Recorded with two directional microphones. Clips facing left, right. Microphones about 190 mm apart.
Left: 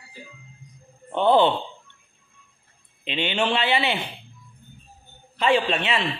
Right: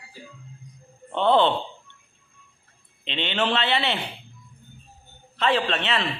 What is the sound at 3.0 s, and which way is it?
Speech, 10° left (ahead or behind).